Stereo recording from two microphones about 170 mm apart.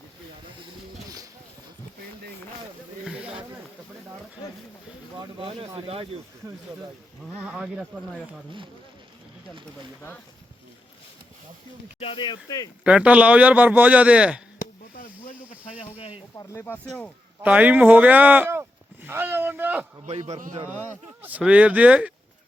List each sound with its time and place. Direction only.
3.0 s snake: 5° right (ahead or behind)
5.4 s speech: 35° right (ahead or behind)
7.4 s speech: 5° right (ahead or behind)
11.9 s speech: 30° left (ahead or behind)
12.8 s a man's voice: 5° right (ahead or behind)
16.4 s speech: 15° left (ahead or behind)
17.4 s a man's voice: 10° right (ahead or behind)
20.1 s speech: 40° right (ahead or behind)
20.6 s a man's voice: 10° right (ahead or behind)